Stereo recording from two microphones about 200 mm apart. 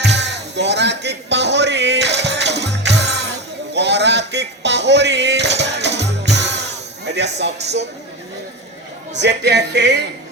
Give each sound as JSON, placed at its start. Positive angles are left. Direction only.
{"t": 0.0, "sound": "music", "side_deg": -60}
{"t": 7.3, "sound": "speech", "side_deg": -60}
{"t": 9.1, "sound": "speech", "side_deg": -60}